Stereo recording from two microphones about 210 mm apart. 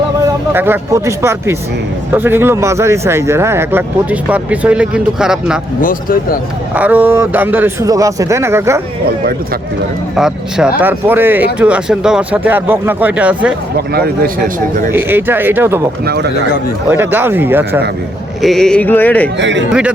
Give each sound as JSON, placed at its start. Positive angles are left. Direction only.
{"t": 0.5, "sound": "speech", "side_deg": -10}
{"t": 5.8, "sound": "speech", "side_deg": 40}
{"t": 6.7, "sound": "speech", "side_deg": -5}
{"t": 10.2, "sound": "speech", "side_deg": -5}
{"t": 13.7, "sound": "speech", "side_deg": -50}
{"t": 14.9, "sound": "speech", "side_deg": -10}
{"t": 16.9, "sound": "speech", "side_deg": -10}
{"t": 18.4, "sound": "a sound", "side_deg": 0}
{"t": 19.4, "sound": "a man's voice", "side_deg": -60}